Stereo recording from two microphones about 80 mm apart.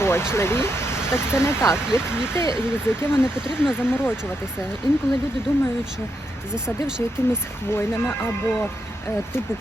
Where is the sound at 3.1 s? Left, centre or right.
Centre.